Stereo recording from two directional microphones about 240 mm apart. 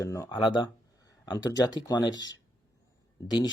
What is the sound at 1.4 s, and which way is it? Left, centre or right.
Speech, centre.